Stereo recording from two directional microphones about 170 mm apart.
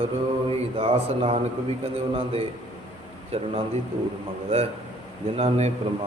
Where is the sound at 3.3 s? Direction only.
35° right (ahead or behind).